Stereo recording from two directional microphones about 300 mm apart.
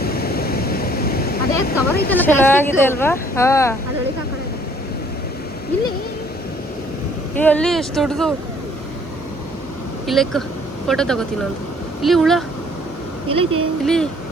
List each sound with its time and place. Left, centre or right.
0.0 s waves: left
2.0 s speech: centre
7.3 s speech: centre
10.1 s speech: centre
13.2 s a woman's voice: centre
13.8 s speech: centre